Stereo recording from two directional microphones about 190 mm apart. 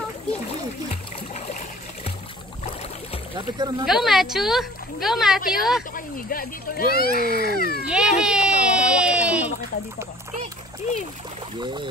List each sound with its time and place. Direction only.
3.3 s speech: 20° right (ahead or behind)
3.8 s speech: centre (ahead or behind)
5.9 s speech: 50° left (ahead or behind)
7.2 s speech: 50° right (ahead or behind)
7.4 s speech: 55° left (ahead or behind)
7.8 s a child's voice: 5° right (ahead or behind)
11.6 s speech: 25° right (ahead or behind)